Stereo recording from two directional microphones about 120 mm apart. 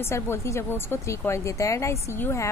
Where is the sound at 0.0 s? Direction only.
20° left (ahead or behind).